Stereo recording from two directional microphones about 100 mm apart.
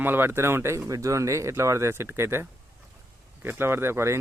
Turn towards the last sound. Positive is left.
turn(degrees=-25)  # may be behind; listen again after turning